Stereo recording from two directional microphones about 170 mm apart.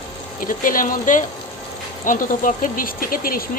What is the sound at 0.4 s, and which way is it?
Speech, 55° left (ahead or behind).